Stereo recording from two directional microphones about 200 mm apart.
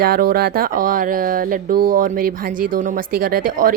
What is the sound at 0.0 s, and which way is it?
A child's voice, 50° right (ahead or behind).